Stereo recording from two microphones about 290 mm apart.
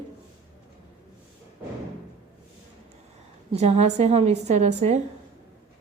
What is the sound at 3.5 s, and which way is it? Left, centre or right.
Speech, right.